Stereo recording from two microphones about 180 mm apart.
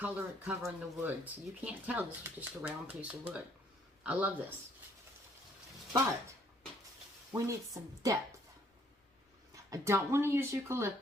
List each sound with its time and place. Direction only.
0.0 s speech: 10° right (ahead or behind)
7.3 s speech: 15° right (ahead or behind)
9.6 s speech: 15° right (ahead or behind)